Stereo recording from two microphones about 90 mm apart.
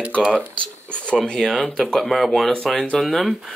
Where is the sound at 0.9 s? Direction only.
10° left (ahead or behind).